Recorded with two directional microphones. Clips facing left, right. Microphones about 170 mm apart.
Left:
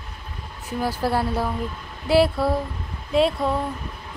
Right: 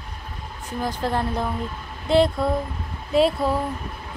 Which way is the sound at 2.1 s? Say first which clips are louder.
Even; 5° left (ahead or behind).